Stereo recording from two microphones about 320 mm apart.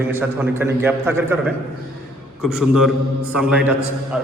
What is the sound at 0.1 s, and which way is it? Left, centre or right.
A man's voice, centre.